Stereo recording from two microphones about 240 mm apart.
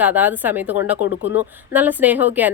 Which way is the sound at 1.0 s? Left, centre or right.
Left.